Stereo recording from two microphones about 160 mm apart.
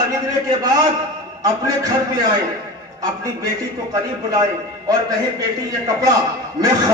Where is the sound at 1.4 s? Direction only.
20° right (ahead or behind).